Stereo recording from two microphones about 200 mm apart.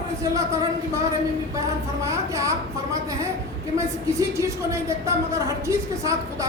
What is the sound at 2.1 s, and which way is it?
Speech, 15° right (ahead or behind).